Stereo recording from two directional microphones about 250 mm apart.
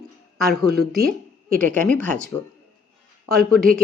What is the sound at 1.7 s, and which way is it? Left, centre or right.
Speech, centre.